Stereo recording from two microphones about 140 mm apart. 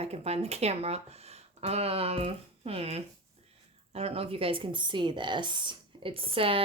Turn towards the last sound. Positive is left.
turn(degrees=-40)  # may be behind; listen again after turning